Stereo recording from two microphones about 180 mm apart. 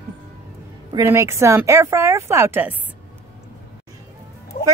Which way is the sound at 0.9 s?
15° right (ahead or behind).